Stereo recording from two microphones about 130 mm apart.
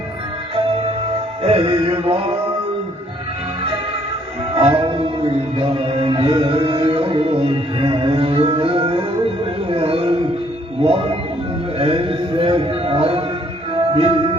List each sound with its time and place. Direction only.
0.5 s music: 45° right (ahead or behind)
4.5 s music: 40° right (ahead or behind)
11.8 s a sound: 45° right (ahead or behind)
13.7 s music: 40° right (ahead or behind)